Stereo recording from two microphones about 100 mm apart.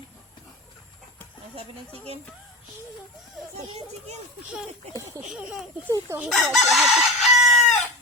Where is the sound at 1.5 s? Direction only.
75° right (ahead or behind).